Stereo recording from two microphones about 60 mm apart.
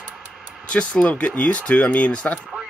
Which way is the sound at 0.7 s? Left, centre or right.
Centre.